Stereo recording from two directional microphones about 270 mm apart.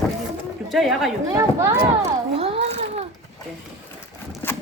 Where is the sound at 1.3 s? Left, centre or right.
Centre.